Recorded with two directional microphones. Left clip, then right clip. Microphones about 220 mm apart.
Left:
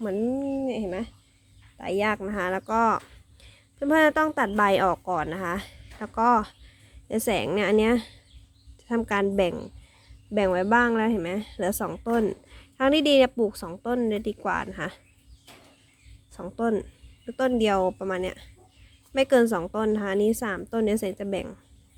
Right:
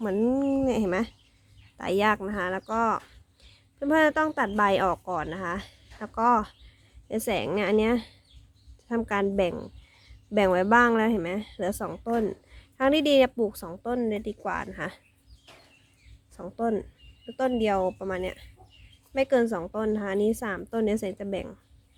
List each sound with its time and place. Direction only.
0.0 s a woman's voice: 10° right (ahead or behind); by 15.0 s 5° left (ahead or behind)
16.3 s a woman's voice: 5° left (ahead or behind)